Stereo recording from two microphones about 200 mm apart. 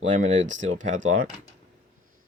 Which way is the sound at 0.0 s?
35° right (ahead or behind).